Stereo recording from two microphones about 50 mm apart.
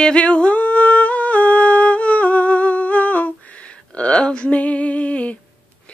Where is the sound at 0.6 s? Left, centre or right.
Left.